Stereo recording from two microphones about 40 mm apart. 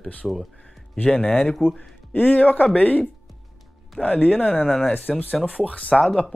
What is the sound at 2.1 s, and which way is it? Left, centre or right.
Speech, left.